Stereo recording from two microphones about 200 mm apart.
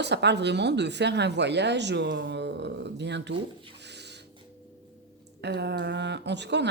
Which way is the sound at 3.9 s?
60° right (ahead or behind).